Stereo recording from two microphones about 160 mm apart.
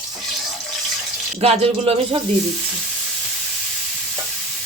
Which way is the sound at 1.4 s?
40° right (ahead or behind).